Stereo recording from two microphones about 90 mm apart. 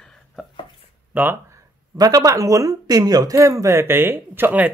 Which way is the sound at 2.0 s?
45° right (ahead or behind).